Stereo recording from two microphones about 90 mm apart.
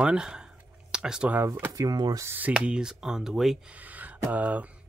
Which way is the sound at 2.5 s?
10° right (ahead or behind).